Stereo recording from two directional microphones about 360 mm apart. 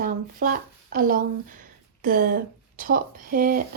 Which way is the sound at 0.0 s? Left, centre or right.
Right.